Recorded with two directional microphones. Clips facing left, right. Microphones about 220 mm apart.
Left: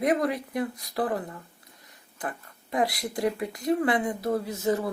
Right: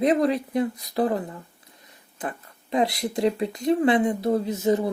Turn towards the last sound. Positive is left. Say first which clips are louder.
# right 4 dB
turn(degrees=-20)  # may be behind; listen again after turning